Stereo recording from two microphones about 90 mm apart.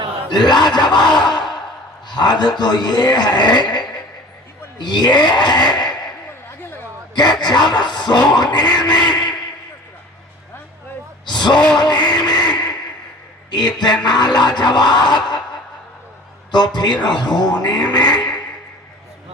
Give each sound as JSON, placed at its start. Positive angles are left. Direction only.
{"t": 0.3, "sound": "speech", "side_deg": 50}
{"t": 4.8, "sound": "a sound", "side_deg": 55}
{"t": 7.2, "sound": "speech", "side_deg": 50}
{"t": 9.0, "sound": "a sound", "side_deg": 50}
{"t": 11.3, "sound": "gasp", "side_deg": 55}
{"t": 13.5, "sound": "speech", "side_deg": 55}
{"t": 16.5, "sound": "speech", "side_deg": 50}